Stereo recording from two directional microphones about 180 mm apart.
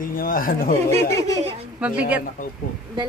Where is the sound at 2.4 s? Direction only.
50° left (ahead or behind).